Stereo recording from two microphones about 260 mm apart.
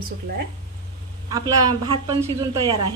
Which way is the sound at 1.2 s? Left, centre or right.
Centre.